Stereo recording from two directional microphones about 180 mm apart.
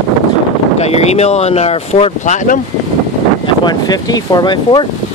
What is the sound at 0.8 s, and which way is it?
Speech, 35° left (ahead or behind).